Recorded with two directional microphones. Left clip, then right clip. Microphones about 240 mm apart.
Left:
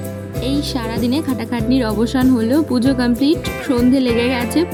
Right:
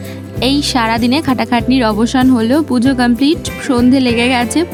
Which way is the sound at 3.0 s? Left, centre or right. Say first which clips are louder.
Right 4 dB; right.